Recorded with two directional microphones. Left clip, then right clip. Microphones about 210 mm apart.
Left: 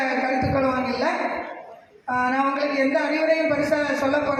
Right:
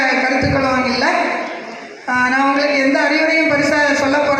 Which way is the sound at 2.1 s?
55° left (ahead or behind).